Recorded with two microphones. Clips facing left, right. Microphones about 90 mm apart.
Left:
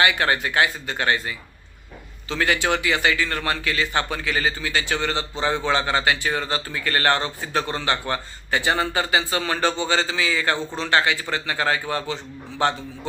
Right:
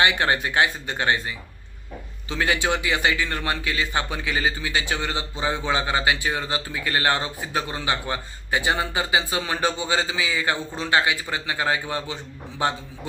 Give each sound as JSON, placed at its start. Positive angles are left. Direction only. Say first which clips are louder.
{"t": 0.0, "sound": "speech", "louder": "left 1 dB", "side_deg": -20}
{"t": 2.3, "sound": "a man's voice", "louder": "left 1 dB", "side_deg": -15}